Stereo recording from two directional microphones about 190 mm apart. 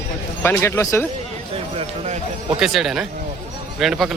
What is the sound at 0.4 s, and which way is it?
Speech, 15° left (ahead or behind).